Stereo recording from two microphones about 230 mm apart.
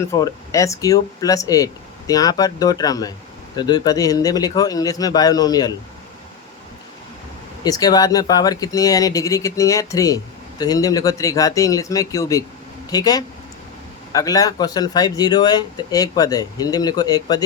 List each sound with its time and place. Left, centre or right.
0.1 s speech: centre
7.6 s speech: centre